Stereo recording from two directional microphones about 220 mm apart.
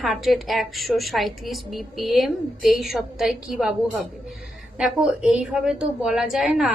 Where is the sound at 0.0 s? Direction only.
Centre (ahead or behind).